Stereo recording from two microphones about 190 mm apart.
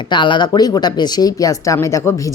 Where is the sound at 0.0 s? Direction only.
25° left (ahead or behind).